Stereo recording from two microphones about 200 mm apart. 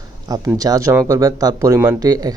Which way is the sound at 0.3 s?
20° right (ahead or behind).